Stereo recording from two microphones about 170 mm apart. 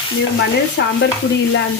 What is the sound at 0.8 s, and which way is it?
Speech, 90° left.